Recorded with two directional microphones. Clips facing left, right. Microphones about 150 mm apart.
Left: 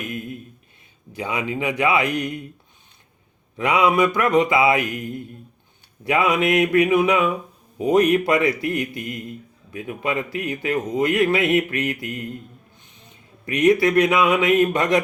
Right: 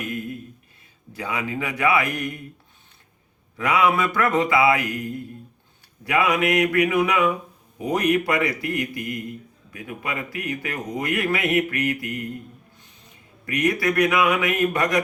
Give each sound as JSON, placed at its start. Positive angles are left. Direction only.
{"t": 1.1, "sound": "speech", "side_deg": 20}
{"t": 3.6, "sound": "speech", "side_deg": 20}
{"t": 13.4, "sound": "speech", "side_deg": 25}